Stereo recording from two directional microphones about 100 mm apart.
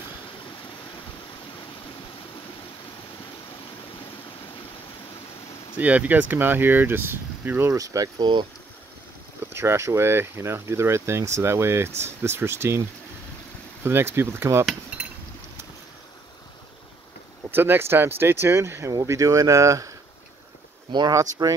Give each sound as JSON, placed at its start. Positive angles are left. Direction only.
{"t": 5.8, "sound": "speech", "side_deg": -15}
{"t": 7.8, "sound": "speech", "side_deg": -35}
{"t": 9.5, "sound": "speech", "side_deg": -25}
{"t": 13.8, "sound": "speech", "side_deg": -25}
{"t": 17.5, "sound": "speech", "side_deg": -20}
{"t": 21.1, "sound": "speech", "side_deg": -35}